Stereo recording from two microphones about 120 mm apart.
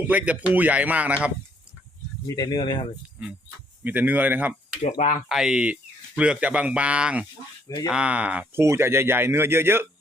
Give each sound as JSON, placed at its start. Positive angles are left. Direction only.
{"t": 0.1, "sound": "speech", "side_deg": -10}
{"t": 2.2, "sound": "speech", "side_deg": 30}
{"t": 3.8, "sound": "speech", "side_deg": -15}
{"t": 4.8, "sound": "speech", "side_deg": 85}
{"t": 5.3, "sound": "speech", "side_deg": -5}
{"t": 8.6, "sound": "speech", "side_deg": -20}